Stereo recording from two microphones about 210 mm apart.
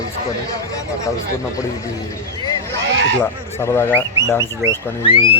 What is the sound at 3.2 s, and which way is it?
Speech, 10° left (ahead or behind).